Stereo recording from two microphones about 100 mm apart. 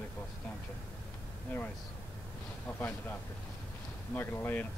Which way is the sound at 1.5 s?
20° left (ahead or behind).